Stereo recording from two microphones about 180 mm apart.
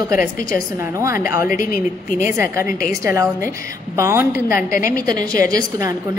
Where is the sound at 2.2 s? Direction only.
15° right (ahead or behind).